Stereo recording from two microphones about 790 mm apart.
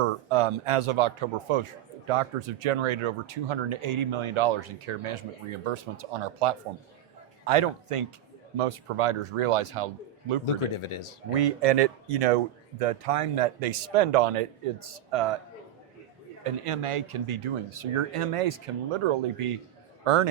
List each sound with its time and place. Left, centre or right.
0.0 s speech: right
10.4 s speech: left
11.3 s speech: right
16.4 s speech: right